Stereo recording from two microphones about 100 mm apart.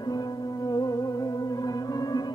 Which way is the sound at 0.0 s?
40° left (ahead or behind).